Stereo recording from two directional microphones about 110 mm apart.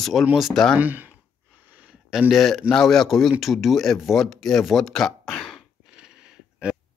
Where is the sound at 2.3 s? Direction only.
Centre (ahead or behind).